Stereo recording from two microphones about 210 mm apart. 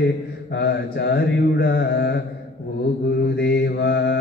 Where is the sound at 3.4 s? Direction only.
50° left (ahead or behind).